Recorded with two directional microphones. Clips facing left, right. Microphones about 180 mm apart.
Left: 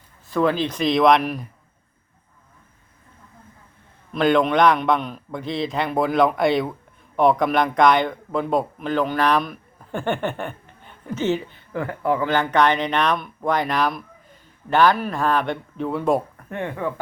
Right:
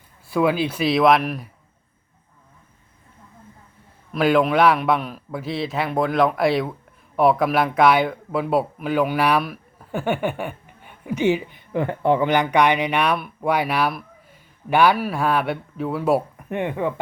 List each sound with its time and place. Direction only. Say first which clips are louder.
0.3 s a man's voice: right 1 dB; 10° right (ahead or behind)
4.1 s a man's voice: even; 5° right (ahead or behind)
16.5 s speech: right 3 dB; 15° right (ahead or behind)